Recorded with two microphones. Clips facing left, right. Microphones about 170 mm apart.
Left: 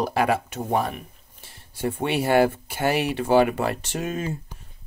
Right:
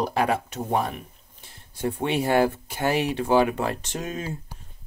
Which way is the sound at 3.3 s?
65° left (ahead or behind).